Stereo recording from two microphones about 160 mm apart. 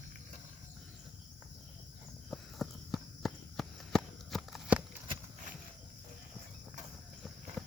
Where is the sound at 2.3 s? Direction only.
Centre (ahead or behind).